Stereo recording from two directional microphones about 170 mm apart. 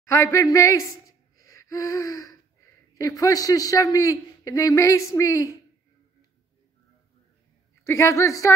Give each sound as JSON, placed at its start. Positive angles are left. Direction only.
{"t": 0.1, "sound": "speech", "side_deg": 15}
{"t": 7.8, "sound": "a woman's voice", "side_deg": 15}